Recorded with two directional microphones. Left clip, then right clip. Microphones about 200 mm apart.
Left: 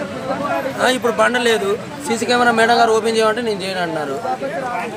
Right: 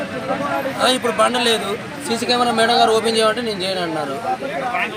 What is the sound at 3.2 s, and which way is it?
Speech, centre (ahead or behind).